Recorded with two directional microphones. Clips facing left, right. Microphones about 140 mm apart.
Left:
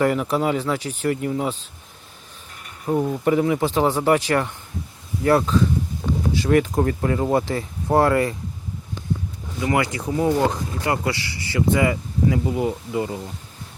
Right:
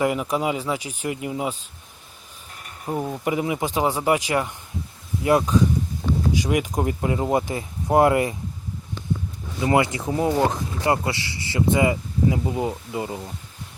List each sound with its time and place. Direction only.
0.0 s speech: 10° right (ahead or behind)
2.8 s speech: 5° right (ahead or behind); by 8.4 s 20° right (ahead or behind)
9.6 s speech: 25° right (ahead or behind)